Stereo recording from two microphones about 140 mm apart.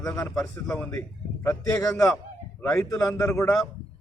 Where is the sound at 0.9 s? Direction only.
20° left (ahead or behind).